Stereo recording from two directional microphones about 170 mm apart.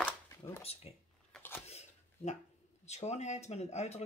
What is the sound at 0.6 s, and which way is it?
Speech, 35° left (ahead or behind).